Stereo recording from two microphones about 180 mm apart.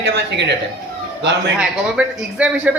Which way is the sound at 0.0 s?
75° right (ahead or behind).